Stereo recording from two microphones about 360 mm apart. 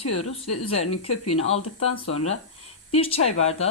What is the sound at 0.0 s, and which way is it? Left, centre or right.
Speech, left.